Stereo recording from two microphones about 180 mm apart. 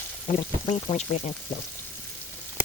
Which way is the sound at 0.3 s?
30° left (ahead or behind).